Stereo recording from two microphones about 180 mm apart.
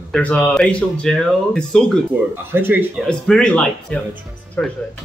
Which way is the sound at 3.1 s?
5° left (ahead or behind).